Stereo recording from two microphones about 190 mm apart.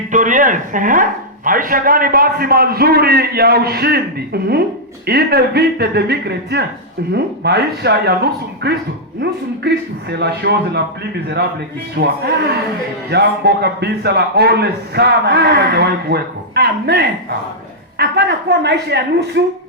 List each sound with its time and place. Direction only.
0.1 s a man's voice: 40° right (ahead or behind); by 10.8 s 60° right (ahead or behind)
11.9 s a man's voice: 55° right (ahead or behind)